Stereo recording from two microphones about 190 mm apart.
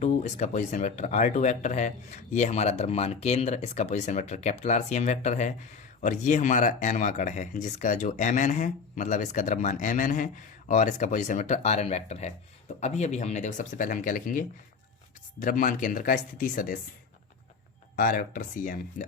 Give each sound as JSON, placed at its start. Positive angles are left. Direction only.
{"t": 0.0, "sound": "speech", "side_deg": 40}
{"t": 17.9, "sound": "speech", "side_deg": 50}